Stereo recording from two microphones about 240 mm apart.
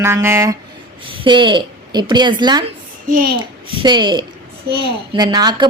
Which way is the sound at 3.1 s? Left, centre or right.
Right.